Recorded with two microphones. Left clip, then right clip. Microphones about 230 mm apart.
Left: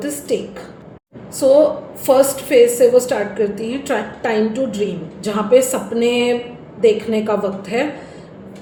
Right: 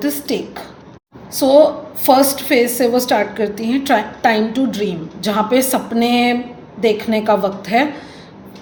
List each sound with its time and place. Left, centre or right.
0.0 s a woman's voice: right
2.0 s a woman's voice: right